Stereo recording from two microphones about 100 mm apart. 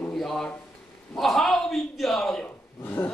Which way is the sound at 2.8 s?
15° left (ahead or behind).